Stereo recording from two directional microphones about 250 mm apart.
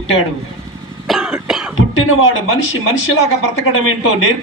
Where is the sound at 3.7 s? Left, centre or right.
Left.